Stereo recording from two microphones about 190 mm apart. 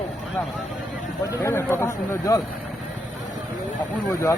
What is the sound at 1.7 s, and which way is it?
Speech, 10° left (ahead or behind).